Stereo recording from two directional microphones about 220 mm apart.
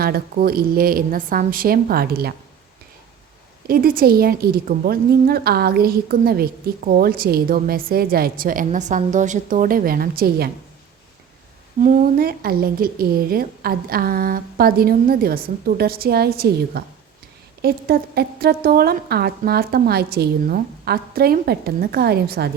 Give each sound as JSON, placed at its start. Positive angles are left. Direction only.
{"t": 0.0, "sound": "a woman's voice", "side_deg": -45}
{"t": 3.7, "sound": "a woman's voice", "side_deg": -40}
{"t": 11.8, "sound": "a woman's voice", "side_deg": -35}